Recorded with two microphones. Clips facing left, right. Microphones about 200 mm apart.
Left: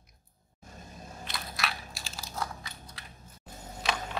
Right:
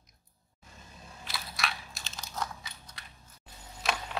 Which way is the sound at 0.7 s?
45° left (ahead or behind).